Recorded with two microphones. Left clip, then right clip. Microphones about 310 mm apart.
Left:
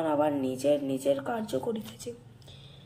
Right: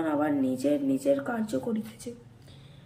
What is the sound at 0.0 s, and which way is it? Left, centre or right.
Speech, centre.